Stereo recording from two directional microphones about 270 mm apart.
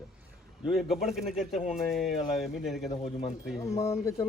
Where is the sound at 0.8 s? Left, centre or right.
Centre.